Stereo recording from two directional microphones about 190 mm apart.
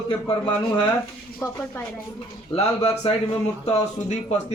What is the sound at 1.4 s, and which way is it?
Speech, 10° left (ahead or behind).